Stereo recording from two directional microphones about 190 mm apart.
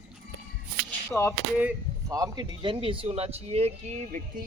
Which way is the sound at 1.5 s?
10° right (ahead or behind).